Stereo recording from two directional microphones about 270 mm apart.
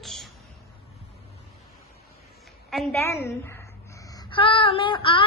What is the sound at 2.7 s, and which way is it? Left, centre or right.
A woman's voice, centre.